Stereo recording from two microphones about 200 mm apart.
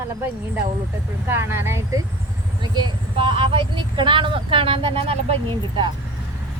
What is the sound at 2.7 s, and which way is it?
Speech, 25° right (ahead or behind).